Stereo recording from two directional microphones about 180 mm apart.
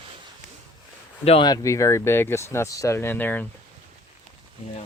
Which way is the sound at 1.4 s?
20° left (ahead or behind).